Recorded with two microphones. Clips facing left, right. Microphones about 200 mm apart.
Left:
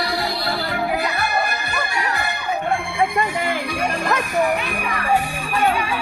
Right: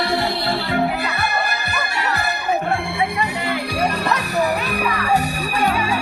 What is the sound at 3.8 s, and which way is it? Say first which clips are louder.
Music: right 1 dB; 40° right (ahead or behind).